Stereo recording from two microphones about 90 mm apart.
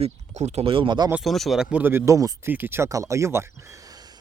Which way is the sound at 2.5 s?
20° right (ahead or behind).